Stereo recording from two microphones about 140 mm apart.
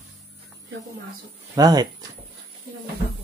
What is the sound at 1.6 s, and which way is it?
Speech, 30° right (ahead or behind).